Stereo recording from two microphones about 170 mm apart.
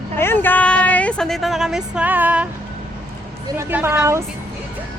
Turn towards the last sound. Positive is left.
turn(degrees=-15)  # may be behind; listen again after turning